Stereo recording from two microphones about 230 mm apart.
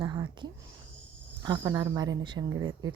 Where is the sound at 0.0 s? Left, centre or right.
Centre.